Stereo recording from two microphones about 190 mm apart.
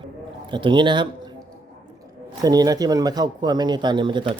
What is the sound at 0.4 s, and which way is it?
Speech, 25° right (ahead or behind).